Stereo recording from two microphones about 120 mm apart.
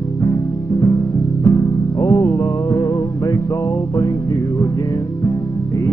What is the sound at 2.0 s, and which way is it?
Speech, 25° left (ahead or behind).